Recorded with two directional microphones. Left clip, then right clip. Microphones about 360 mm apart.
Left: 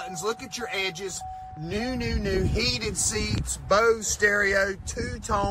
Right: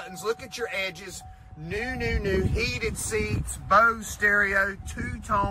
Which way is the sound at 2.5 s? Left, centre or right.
Centre.